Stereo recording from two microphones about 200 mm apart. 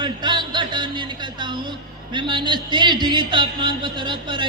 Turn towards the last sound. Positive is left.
turn(degrees=-25)  # may be behind; listen again after turning